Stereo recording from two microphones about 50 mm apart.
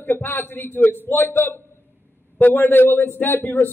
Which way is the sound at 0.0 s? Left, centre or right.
Left.